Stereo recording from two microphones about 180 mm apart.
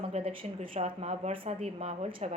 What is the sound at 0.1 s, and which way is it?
A woman's voice, 35° right (ahead or behind).